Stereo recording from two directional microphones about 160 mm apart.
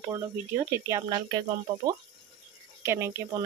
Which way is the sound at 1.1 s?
25° right (ahead or behind).